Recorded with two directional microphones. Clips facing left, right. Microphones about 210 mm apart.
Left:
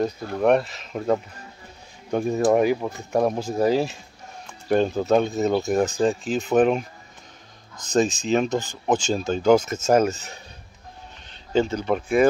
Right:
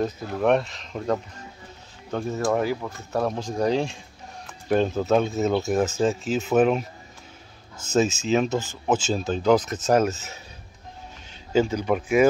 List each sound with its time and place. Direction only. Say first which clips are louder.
0.0 s speech: left 2 dB; centre (ahead or behind)
7.9 s speech: left 1 dB; 5° right (ahead or behind)
11.5 s speech: even; 10° right (ahead or behind)